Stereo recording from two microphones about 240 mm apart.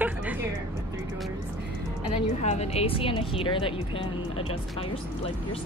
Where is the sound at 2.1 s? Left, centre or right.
Left.